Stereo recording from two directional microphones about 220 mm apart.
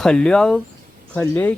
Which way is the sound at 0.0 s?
5° left (ahead or behind).